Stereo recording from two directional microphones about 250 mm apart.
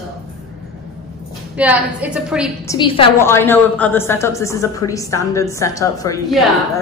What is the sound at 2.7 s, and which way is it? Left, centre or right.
A woman's voice, centre.